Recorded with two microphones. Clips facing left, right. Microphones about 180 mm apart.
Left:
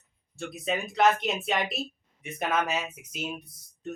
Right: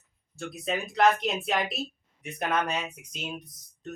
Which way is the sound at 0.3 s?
Centre (ahead or behind).